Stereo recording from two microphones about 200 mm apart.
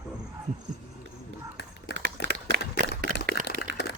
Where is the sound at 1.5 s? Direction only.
55° left (ahead or behind).